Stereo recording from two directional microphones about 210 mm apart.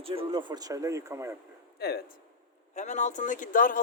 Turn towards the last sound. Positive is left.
turn(degrees=40)  # may be behind; listen again after turning